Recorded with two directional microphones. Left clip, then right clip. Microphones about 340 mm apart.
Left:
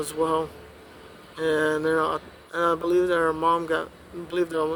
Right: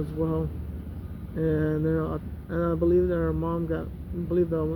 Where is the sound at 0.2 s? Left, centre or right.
Centre.